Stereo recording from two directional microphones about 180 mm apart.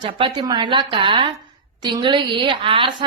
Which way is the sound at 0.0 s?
25° right (ahead or behind).